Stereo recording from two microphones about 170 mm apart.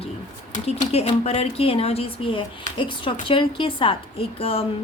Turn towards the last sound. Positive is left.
turn(degrees=35)  # may be behind; listen again after turning